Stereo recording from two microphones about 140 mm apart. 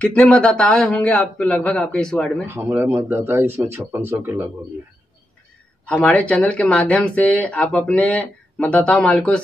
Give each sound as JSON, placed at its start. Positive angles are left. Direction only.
{"t": 0.0, "sound": "speech", "side_deg": 10}
{"t": 2.4, "sound": "speech", "side_deg": -15}
{"t": 5.9, "sound": "speech", "side_deg": 10}